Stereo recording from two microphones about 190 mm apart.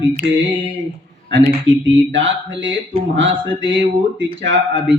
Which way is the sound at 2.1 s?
75° right (ahead or behind).